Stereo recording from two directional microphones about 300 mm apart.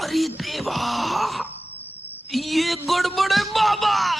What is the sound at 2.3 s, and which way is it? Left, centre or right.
A man's voice, centre.